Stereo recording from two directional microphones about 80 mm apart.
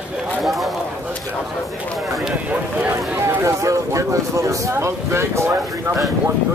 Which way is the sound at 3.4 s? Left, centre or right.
Right.